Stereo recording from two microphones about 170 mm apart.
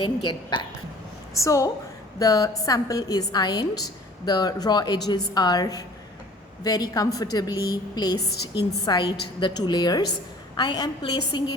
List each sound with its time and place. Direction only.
0.0 s a woman's voice: 30° left (ahead or behind)
1.4 s a woman's voice: 20° left (ahead or behind)